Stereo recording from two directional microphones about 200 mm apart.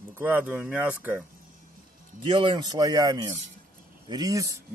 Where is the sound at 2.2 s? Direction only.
25° right (ahead or behind).